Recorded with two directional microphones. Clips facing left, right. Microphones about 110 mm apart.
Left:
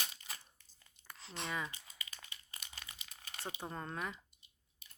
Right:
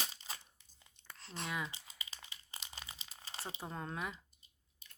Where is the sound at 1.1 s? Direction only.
Centre (ahead or behind).